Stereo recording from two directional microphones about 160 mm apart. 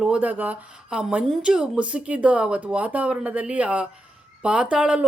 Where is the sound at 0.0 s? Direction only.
10° right (ahead or behind).